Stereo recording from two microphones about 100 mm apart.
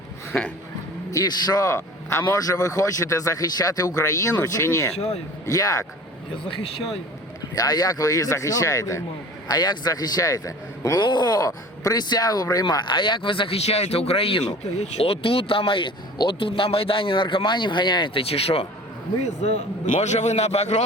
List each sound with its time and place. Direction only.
1.1 s speech: 40° left (ahead or behind)
6.3 s speech: 65° left (ahead or behind)
7.5 s speech: 40° left (ahead or behind)
9.5 s speech: 45° left (ahead or behind)
11.0 s speech: 50° left (ahead or behind); by 14.4 s 75° left (ahead or behind)
14.8 s speech: 90° left
19.4 s a man's voice: 90° left